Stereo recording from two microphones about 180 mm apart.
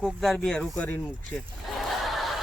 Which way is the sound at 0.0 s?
Centre (ahead or behind).